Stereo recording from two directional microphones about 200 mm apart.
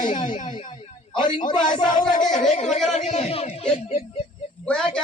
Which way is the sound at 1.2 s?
25° left (ahead or behind).